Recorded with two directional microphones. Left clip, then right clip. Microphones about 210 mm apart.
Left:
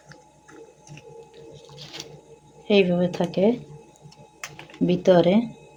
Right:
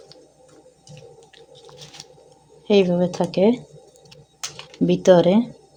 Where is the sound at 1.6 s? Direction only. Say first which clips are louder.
Left 2 dB; 20° right (ahead or behind).